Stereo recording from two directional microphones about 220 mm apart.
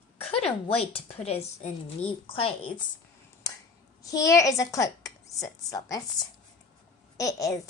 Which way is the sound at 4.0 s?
15° left (ahead or behind).